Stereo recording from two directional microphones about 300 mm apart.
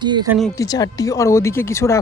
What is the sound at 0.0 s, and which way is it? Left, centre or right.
Speech, centre.